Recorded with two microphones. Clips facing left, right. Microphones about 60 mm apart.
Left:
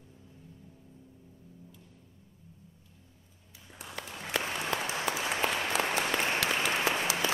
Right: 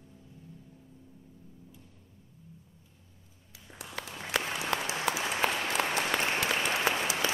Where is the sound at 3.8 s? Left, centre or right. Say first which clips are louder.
Right 1 dB; right.